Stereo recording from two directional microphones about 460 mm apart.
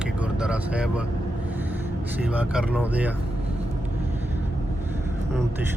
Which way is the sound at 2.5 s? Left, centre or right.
Centre.